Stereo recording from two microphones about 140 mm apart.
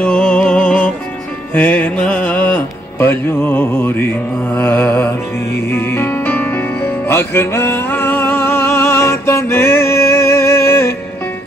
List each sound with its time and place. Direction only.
0.0 s music: 10° left (ahead or behind)
1.5 s speech: 10° left (ahead or behind)
4.6 s mantra: 15° left (ahead or behind)
5.7 s music: 15° left (ahead or behind)